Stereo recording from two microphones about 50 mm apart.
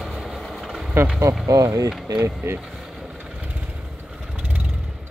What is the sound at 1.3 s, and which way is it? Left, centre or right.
Speech, right.